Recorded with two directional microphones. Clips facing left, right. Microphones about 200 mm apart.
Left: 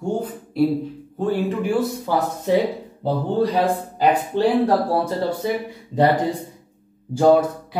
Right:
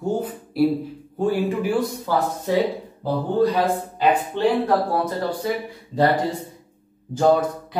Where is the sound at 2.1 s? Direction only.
15° left (ahead or behind).